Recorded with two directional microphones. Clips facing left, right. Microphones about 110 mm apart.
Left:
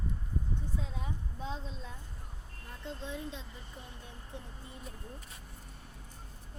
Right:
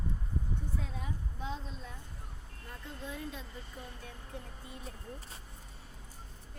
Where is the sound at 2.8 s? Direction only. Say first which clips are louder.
Left 2 dB; 25° left (ahead or behind).